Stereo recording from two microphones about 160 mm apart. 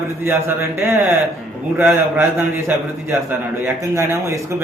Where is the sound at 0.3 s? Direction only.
15° right (ahead or behind).